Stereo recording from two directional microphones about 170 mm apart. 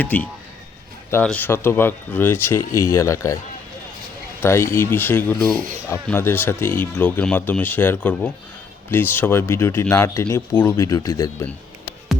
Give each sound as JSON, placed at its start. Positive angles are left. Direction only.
{"t": 0.0, "sound": "speech", "side_deg": 10}
{"t": 4.7, "sound": "speech", "side_deg": 15}